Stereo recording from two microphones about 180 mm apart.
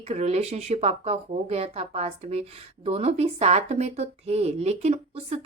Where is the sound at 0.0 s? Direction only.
35° right (ahead or behind).